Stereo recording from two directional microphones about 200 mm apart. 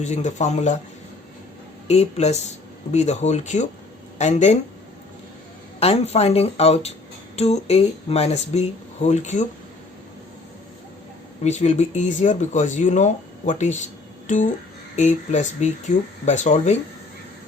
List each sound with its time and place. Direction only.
0.0 s speech: 35° left (ahead or behind)
1.9 s speech: 35° left (ahead or behind)
5.8 s speech: 30° left (ahead or behind)
11.4 s speech: 35° left (ahead or behind)